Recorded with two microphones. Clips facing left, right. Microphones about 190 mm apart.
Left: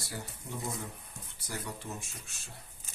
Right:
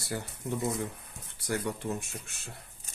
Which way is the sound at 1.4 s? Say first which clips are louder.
Right 9 dB; 60° right (ahead or behind).